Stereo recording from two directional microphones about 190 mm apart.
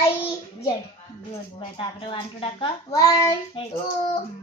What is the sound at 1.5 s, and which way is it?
A woman's voice, 30° left (ahead or behind).